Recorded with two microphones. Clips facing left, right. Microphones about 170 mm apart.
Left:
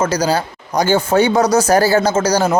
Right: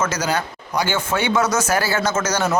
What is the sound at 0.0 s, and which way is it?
Speech, 35° left (ahead or behind).